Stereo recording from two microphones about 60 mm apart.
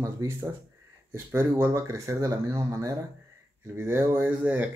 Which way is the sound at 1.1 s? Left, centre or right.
Right.